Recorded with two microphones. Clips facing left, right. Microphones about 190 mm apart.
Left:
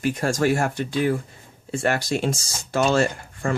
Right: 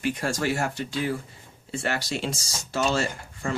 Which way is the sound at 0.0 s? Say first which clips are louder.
Left 5 dB; 45° left (ahead or behind).